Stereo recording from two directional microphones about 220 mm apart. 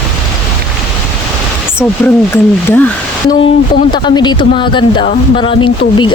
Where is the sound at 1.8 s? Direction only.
Centre (ahead or behind).